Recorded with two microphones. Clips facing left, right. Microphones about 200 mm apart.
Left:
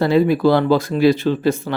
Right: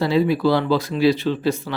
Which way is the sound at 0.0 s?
50° left (ahead or behind).